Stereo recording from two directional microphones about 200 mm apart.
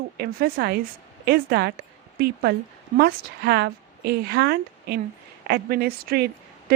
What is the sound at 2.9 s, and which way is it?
A woman's voice, 55° right (ahead or behind).